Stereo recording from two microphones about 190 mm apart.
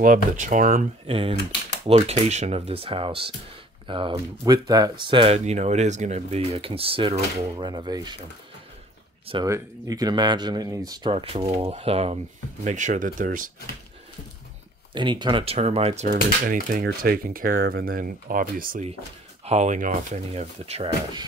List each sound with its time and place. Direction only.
0.0 s speech: 45° right (ahead or behind)
1.0 s speech: 30° right (ahead or behind)
9.3 s speech: 20° right (ahead or behind); by 13.5 s 45° right (ahead or behind)
15.0 s speech: 25° right (ahead or behind)
16.1 s speech: 45° right (ahead or behind)
19.4 s speech: 35° right (ahead or behind)